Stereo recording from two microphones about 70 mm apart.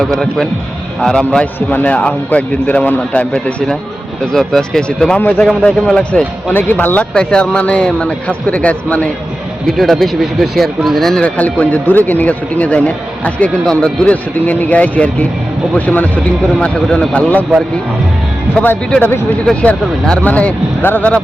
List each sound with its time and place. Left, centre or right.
0.9 s a man's voice: centre
1.5 s a man's voice: left
6.5 s speech: left
7.1 s a man's voice: centre
9.6 s speech: centre
11.2 s speech: centre
16.6 s a man's voice: centre
18.6 s speech: left